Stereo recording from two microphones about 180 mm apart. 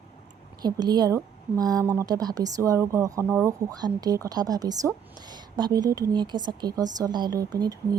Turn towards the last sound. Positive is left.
turn(degrees=-20)  # may be behind; listen again after turning